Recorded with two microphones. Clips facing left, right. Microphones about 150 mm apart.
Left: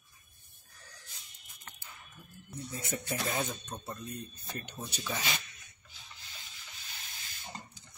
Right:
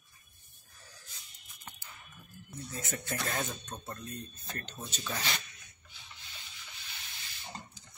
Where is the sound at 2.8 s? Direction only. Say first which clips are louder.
Left 1 dB; 15° left (ahead or behind).